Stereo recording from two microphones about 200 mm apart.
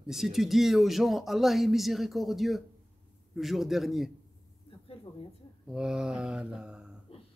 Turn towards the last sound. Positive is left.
turn(degrees=-5)  # may be behind; listen again after turning